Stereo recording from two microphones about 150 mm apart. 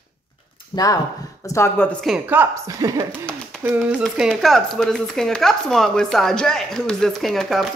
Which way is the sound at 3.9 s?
5° right (ahead or behind).